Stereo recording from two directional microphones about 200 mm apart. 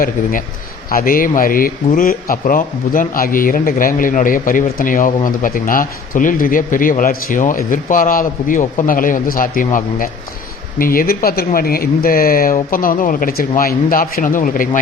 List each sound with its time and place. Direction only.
0.0 s a man's voice: 45° left (ahead or behind)